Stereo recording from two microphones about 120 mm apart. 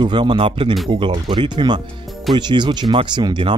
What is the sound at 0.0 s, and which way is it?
Speech, 40° right (ahead or behind).